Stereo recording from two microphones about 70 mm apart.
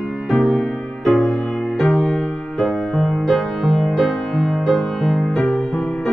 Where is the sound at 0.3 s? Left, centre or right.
Centre.